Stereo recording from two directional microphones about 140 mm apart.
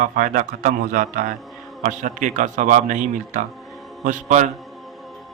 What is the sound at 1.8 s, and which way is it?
A man's voice, 65° right (ahead or behind).